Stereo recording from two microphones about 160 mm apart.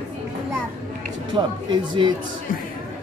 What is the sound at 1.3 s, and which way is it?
Speech, 30° right (ahead or behind).